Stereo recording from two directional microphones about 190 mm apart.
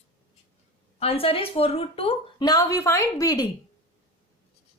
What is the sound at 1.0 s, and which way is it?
Speech, 30° left (ahead or behind).